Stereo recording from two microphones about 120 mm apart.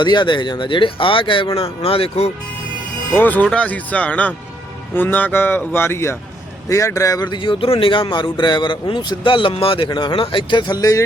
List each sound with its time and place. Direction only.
0.0 s speech: 40° left (ahead or behind); by 2.3 s 55° left (ahead or behind)
3.2 s a man's voice: 15° left (ahead or behind); by 11.0 s 30° left (ahead or behind)